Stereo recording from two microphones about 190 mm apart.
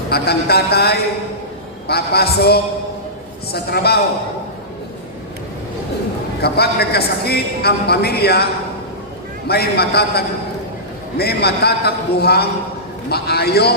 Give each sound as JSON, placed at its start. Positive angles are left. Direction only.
{"t": 0.1, "sound": "a man's voice", "side_deg": 55}
{"t": 6.4, "sound": "a man's voice", "side_deg": 55}
{"t": 9.5, "sound": "a man's voice", "side_deg": 55}